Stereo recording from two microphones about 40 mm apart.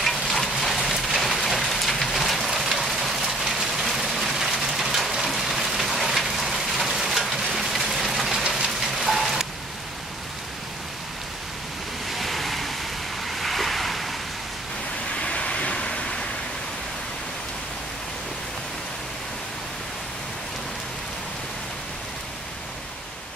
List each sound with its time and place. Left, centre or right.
0.2 s rain: centre
8.6 s rain on surface: centre
12.1 s vehicle: centre
13.3 s waves: centre
15.1 s vehicle: left